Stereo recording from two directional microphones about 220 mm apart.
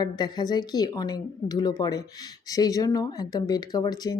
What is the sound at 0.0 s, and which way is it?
Speech, 20° left (ahead or behind).